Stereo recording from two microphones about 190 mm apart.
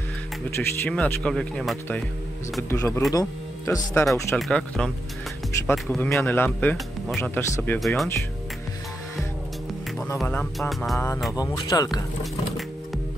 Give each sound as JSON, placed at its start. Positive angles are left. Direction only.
{"t": 0.6, "sound": "speech", "side_deg": 10}
{"t": 2.7, "sound": "speech", "side_deg": 15}
{"t": 4.4, "sound": "speech", "side_deg": 5}
{"t": 10.1, "sound": "speech", "side_deg": 5}
{"t": 11.3, "sound": "speech", "side_deg": 20}
{"t": 12.2, "sound": "music", "side_deg": 0}